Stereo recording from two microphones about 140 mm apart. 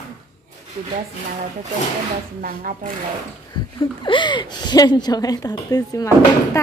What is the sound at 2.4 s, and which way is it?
Speech, 85° right.